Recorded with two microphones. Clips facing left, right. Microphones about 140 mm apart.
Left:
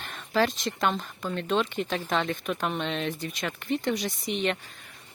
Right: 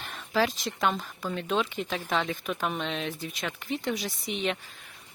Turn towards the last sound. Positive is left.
turn(degrees=0)  # may be behind; listen again after turning